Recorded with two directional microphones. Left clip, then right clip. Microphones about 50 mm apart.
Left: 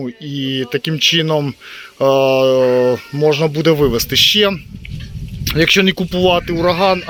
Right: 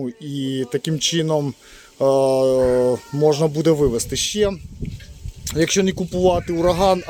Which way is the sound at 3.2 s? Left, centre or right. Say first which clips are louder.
Left 3 dB; right.